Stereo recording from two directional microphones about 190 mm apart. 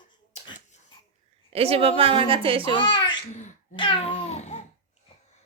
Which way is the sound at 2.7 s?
25° left (ahead or behind).